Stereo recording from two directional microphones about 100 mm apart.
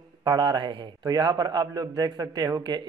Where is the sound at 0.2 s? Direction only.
45° right (ahead or behind).